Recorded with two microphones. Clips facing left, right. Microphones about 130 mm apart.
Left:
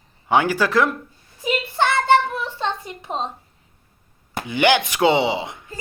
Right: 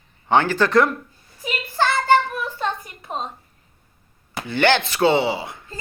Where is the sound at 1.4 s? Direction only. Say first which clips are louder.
Left 2 dB; 20° left (ahead or behind).